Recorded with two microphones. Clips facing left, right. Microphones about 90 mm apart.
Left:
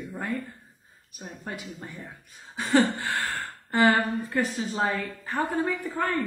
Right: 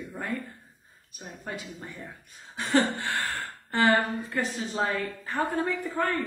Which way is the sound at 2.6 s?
Centre (ahead or behind).